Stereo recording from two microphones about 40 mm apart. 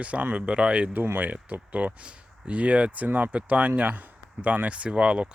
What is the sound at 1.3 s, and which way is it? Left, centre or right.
Speech, right.